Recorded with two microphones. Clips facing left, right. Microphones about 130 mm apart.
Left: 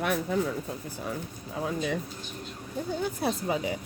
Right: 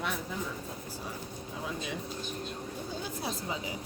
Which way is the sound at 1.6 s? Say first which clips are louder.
Left 8 dB; 50° left (ahead or behind).